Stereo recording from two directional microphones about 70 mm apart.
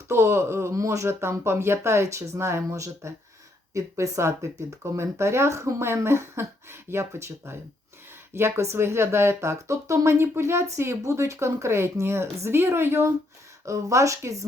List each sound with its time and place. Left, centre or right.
0.1 s speech: right
13.7 s speech: right